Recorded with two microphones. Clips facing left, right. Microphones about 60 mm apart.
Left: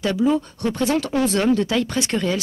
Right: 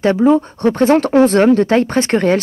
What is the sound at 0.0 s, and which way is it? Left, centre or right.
Speech, right.